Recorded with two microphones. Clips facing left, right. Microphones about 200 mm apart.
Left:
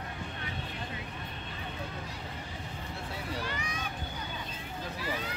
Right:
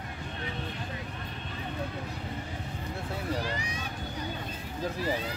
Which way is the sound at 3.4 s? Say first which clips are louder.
Right 3 dB; 35° right (ahead or behind).